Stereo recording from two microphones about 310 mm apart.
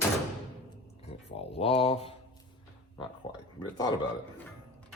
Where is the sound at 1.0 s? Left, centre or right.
Centre.